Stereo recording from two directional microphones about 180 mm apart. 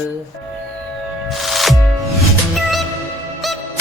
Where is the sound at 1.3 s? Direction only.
Centre (ahead or behind).